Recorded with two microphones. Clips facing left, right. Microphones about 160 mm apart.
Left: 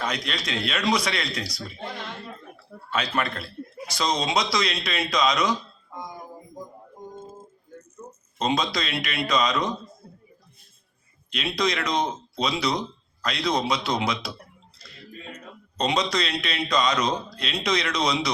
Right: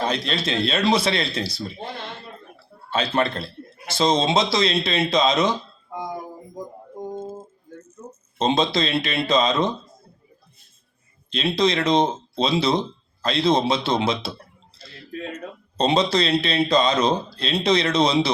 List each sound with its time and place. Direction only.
0.0 s a man's voice: 30° right (ahead or behind)
5.9 s music: 90° right
8.4 s a man's voice: 25° right (ahead or behind)
11.3 s a man's voice: 25° right (ahead or behind)
15.1 s a sound: 70° right (ahead or behind)
15.8 s a man's voice: 30° right (ahead or behind)